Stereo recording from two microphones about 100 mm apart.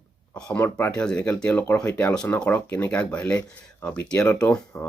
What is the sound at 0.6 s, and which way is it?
Speech, 20° left (ahead or behind).